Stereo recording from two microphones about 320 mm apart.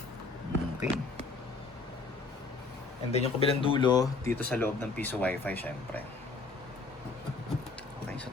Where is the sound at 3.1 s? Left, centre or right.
Centre.